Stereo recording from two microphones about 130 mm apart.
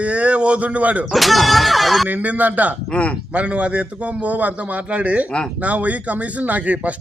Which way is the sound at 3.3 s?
10° right (ahead or behind).